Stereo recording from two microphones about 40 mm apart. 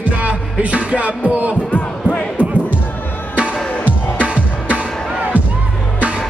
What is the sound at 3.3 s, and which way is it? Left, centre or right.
Music, right.